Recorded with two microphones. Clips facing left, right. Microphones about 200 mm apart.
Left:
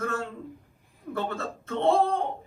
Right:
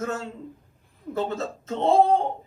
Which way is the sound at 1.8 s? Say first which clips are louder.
Right 3 dB; 55° left (ahead or behind).